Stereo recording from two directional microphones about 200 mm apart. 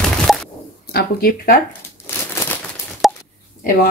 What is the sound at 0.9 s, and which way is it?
Speech, 45° left (ahead or behind).